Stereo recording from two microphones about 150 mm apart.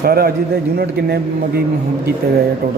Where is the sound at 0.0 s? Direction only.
90° right.